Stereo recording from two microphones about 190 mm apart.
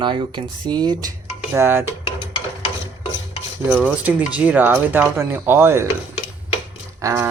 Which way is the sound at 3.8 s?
5° right (ahead or behind).